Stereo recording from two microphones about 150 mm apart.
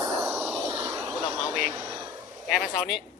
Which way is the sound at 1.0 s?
20° right (ahead or behind).